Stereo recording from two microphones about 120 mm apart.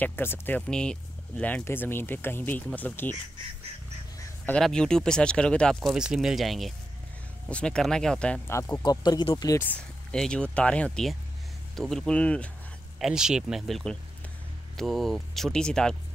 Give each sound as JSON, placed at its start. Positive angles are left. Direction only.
{"t": 0.0, "sound": "speech", "side_deg": 15}
{"t": 4.5, "sound": "speech", "side_deg": 5}
{"t": 8.5, "sound": "speech", "side_deg": 25}
{"t": 9.0, "sound": "speech", "side_deg": 35}
{"t": 10.1, "sound": "speech", "side_deg": 5}
{"t": 13.0, "sound": "speech", "side_deg": -5}